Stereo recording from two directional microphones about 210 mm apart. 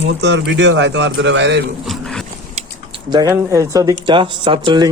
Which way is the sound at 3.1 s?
15° right (ahead or behind).